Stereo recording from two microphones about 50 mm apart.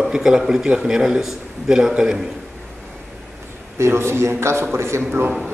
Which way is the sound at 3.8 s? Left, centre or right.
Right.